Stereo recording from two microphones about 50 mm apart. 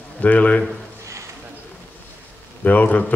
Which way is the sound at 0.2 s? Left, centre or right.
Left.